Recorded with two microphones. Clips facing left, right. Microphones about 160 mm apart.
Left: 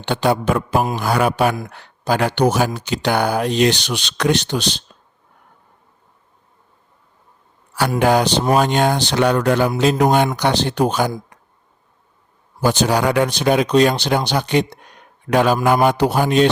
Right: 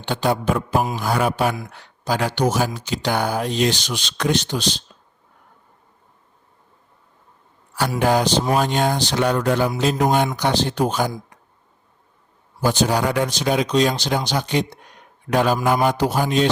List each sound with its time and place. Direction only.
0.0 s speech: 70° left (ahead or behind)
7.8 s speech: 70° left (ahead or behind)
12.6 s speech: 75° left (ahead or behind)
15.3 s speech: 75° left (ahead or behind)